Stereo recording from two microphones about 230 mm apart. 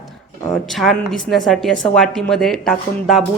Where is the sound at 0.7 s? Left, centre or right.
Centre.